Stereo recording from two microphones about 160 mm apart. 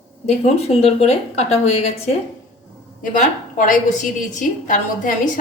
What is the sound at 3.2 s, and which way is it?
A woman's voice, 50° left (ahead or behind).